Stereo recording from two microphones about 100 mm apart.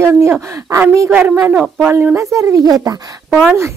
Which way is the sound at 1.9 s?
25° right (ahead or behind).